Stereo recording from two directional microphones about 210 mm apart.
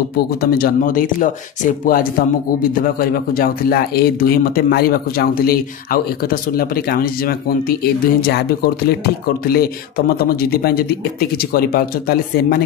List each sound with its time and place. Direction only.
0.4 s a man's voice: 45° left (ahead or behind)
10.5 s a man's voice: 45° left (ahead or behind)